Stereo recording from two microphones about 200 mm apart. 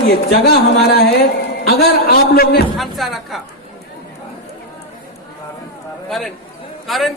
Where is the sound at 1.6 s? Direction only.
50° left (ahead or behind).